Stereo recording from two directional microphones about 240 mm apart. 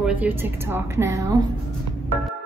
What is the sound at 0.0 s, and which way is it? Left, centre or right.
A woman's voice, centre.